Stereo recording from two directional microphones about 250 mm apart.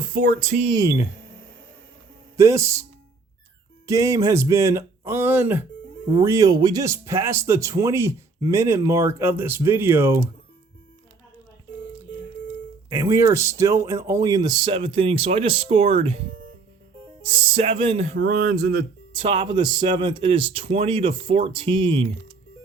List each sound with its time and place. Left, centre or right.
0.1 s speech: right; by 1.0 s centre
2.4 s speech: centre
3.8 s speech: centre
12.9 s speech: centre
17.3 s speech: right
18.2 s a sound: right
19.1 s speech: centre